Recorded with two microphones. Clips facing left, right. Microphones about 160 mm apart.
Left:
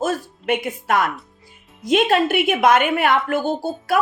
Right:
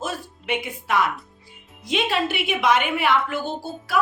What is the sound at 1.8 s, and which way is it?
A woman's voice, 50° left (ahead or behind).